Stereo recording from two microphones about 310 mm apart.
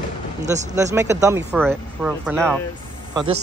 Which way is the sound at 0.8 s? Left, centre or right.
Centre.